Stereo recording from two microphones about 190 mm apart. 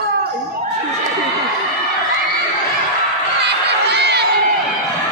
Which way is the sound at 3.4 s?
60° right (ahead or behind).